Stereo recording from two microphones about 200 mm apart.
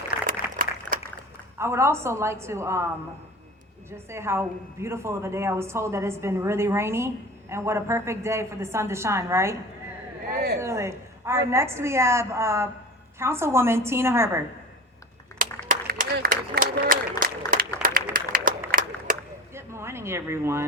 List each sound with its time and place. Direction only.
0.3 s a sound: 45° right (ahead or behind)
1.5 s a woman's voice: 15° right (ahead or behind)
3.9 s a woman's voice: 15° right (ahead or behind)
10.3 s a woman's voice: 55° right (ahead or behind)
10.6 s a woman's voice: 15° right (ahead or behind)
15.7 s applause: 45° right (ahead or behind)
19.5 s a sound: 15° right (ahead or behind)